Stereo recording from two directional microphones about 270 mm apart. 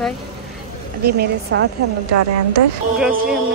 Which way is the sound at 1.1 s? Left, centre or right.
Right.